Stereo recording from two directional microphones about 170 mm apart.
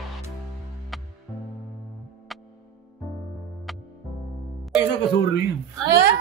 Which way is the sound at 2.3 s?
Centre (ahead or behind).